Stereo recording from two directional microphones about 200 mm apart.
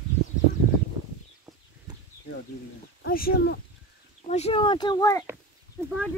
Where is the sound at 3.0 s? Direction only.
50° left (ahead or behind).